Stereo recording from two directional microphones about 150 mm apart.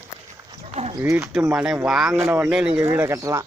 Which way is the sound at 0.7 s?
40° right (ahead or behind).